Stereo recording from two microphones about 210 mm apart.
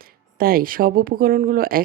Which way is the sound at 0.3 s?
45° right (ahead or behind).